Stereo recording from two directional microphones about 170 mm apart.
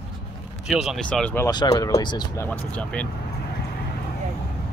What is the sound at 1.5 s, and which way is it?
Speech, 25° left (ahead or behind).